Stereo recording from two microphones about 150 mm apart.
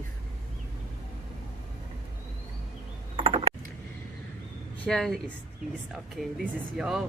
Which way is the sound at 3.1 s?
40° right (ahead or behind).